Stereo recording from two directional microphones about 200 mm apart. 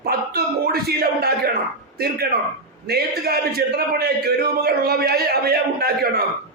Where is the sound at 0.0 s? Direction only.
50° right (ahead or behind).